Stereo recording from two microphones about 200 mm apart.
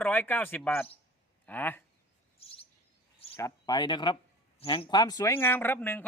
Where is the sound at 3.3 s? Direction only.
15° left (ahead or behind).